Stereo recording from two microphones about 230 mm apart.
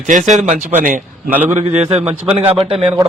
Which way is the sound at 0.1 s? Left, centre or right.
Right.